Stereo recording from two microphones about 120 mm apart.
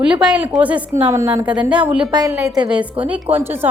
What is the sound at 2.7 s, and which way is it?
Speech, 10° right (ahead or behind).